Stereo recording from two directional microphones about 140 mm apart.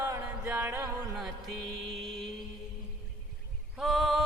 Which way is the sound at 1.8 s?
Centre (ahead or behind).